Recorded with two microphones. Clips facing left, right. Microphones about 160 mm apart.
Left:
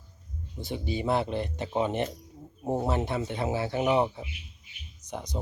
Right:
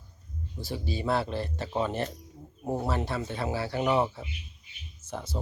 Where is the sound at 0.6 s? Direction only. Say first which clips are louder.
Left 2 dB; 20° left (ahead or behind).